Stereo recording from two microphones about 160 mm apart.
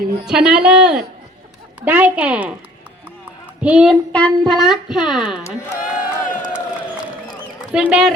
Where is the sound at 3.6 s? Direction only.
5° right (ahead or behind).